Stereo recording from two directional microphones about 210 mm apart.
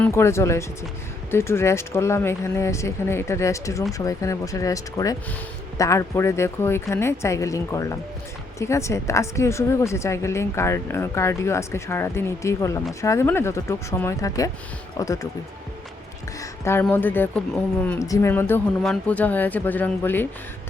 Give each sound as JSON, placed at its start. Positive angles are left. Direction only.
{"t": 0.0, "sound": "a woman's voice", "side_deg": 10}
{"t": 16.4, "sound": "music", "side_deg": 10}
{"t": 16.8, "sound": "a woman's voice", "side_deg": 10}